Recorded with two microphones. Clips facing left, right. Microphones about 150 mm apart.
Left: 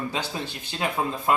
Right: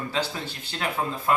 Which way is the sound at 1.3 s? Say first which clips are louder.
Even; 20° left (ahead or behind).